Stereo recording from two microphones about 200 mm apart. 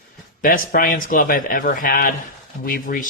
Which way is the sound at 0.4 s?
45° left (ahead or behind).